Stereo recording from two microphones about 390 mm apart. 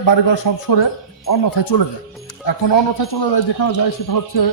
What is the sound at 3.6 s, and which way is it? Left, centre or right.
Speech, left.